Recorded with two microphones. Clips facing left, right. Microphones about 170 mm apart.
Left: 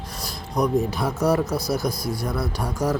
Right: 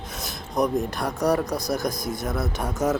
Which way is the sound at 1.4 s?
15° right (ahead or behind).